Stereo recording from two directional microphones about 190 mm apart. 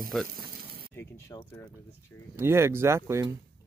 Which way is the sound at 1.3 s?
15° left (ahead or behind).